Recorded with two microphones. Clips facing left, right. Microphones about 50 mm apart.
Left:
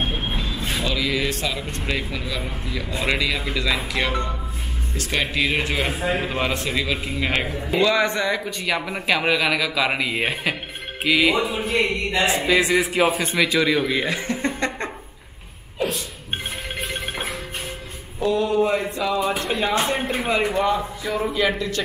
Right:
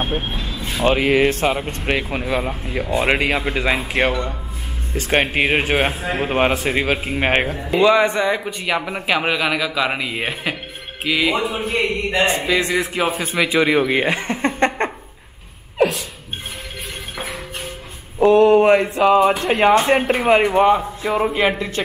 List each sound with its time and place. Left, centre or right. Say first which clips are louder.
0.8 s speech: right 10 dB; right
7.8 s a man's voice: right 5 dB; right; by 11.5 s centre
11.5 s a man's voice: right 1 dB; right
12.4 s speech: even; centre
13.4 s speech: right 4 dB; right
15.8 s a sound: right 8 dB; right
18.2 s a sound: right 8 dB; right
18.9 s speech: right 9 dB; right
20.4 s speech: right 6 dB; right